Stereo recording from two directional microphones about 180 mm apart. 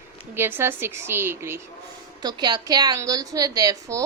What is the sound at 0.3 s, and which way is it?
A woman's voice, 15° right (ahead or behind).